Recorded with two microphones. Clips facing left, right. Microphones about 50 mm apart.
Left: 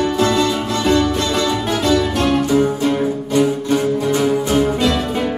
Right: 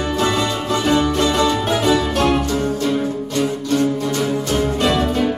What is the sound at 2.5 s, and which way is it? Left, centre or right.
Music, centre.